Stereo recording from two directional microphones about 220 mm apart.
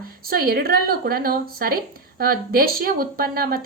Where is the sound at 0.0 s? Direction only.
40° right (ahead or behind).